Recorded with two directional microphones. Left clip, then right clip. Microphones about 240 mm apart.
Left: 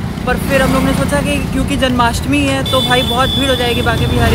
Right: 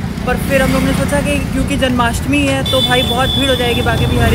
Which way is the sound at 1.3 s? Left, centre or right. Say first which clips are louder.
Even; centre.